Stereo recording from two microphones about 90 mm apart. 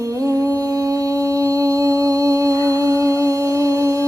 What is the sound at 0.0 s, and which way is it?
Mantra, 40° right (ahead or behind).